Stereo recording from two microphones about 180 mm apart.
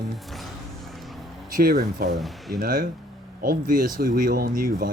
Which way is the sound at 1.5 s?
50° right (ahead or behind).